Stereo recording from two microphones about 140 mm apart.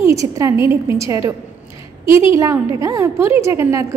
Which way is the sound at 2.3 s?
20° right (ahead or behind).